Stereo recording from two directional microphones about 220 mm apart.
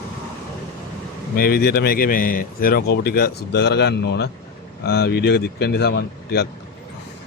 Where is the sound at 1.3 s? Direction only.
45° left (ahead or behind).